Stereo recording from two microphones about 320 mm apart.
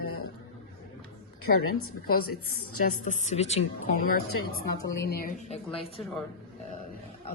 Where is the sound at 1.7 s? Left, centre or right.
Left.